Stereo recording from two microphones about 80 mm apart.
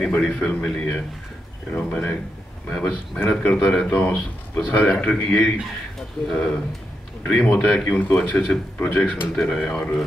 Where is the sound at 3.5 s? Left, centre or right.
Centre.